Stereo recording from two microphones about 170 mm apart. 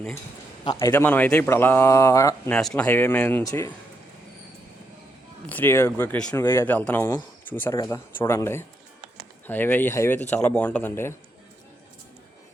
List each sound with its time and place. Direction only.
0.6 s a man's voice: 25° left (ahead or behind)
2.5 s a man's voice: 5° left (ahead or behind)
5.5 s a man's voice: 10° left (ahead or behind)